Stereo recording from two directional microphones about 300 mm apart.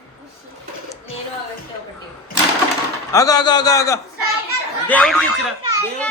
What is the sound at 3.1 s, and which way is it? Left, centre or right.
A man's voice, centre.